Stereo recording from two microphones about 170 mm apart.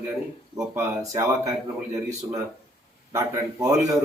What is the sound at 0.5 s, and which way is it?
Speech, 15° right (ahead or behind).